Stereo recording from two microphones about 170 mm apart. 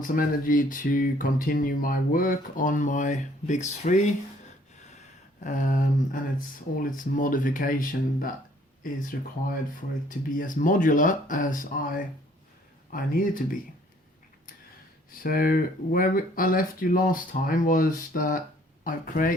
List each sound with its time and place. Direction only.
0.0 s speech: 55° left (ahead or behind)
4.8 s a sound: 45° left (ahead or behind)
6.7 s speech: 55° left (ahead or behind)
15.2 s speech: 60° left (ahead or behind)